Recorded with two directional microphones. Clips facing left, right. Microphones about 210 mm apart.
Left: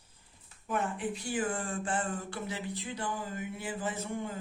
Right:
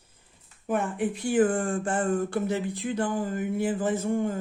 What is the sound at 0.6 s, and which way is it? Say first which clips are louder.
Speech: right 6 dB; 55° right (ahead or behind).